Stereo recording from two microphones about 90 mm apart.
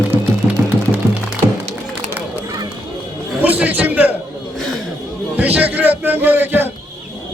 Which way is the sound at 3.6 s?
15° right (ahead or behind).